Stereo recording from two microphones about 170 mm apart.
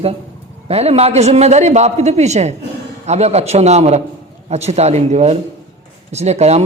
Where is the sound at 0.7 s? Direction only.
40° right (ahead or behind).